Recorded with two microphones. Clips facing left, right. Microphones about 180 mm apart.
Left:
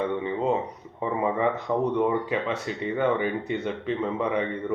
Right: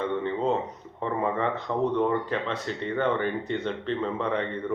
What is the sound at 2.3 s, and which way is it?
A man's voice, 10° left (ahead or behind).